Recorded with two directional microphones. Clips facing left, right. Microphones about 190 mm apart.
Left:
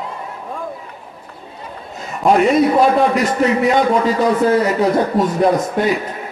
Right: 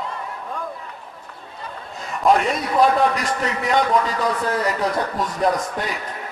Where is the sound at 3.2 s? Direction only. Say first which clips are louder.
Left 9 dB; 5° left (ahead or behind).